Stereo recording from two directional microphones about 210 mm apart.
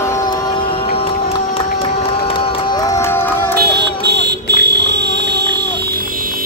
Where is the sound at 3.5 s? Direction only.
55° right (ahead or behind).